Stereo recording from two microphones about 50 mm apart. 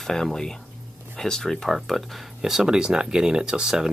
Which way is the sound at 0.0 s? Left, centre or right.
Centre.